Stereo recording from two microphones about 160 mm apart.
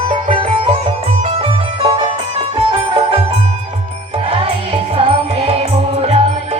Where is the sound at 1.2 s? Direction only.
35° right (ahead or behind).